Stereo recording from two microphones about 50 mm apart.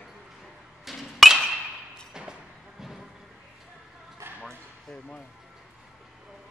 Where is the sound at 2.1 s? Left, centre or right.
Centre.